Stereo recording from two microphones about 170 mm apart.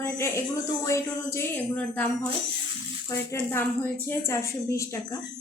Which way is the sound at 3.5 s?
15° left (ahead or behind).